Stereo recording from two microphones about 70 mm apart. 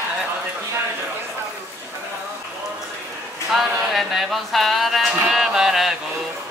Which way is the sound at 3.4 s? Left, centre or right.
Centre.